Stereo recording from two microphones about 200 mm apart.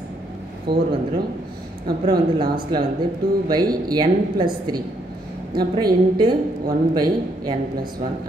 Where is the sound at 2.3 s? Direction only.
25° right (ahead or behind).